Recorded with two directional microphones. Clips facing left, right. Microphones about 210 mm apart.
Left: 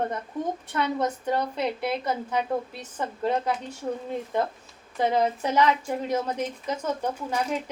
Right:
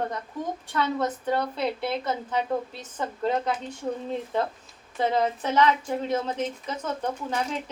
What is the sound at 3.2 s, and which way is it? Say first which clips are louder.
Speech: even; centre (ahead or behind).